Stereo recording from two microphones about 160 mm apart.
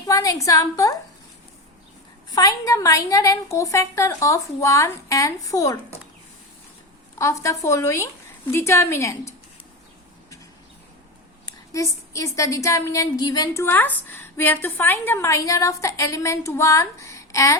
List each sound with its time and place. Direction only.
0.0 s a woman's voice: 20° left (ahead or behind)
2.3 s a woman's voice: 25° left (ahead or behind)
7.2 s speech: 20° left (ahead or behind)
11.4 s a woman's voice: 20° left (ahead or behind)